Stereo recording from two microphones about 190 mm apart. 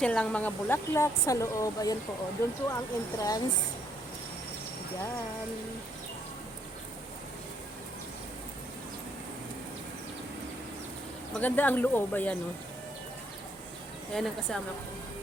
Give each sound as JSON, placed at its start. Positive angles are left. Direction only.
{"t": 0.0, "sound": "speech", "side_deg": 5}
{"t": 11.3, "sound": "speech", "side_deg": 10}
{"t": 14.1, "sound": "a woman's voice", "side_deg": 5}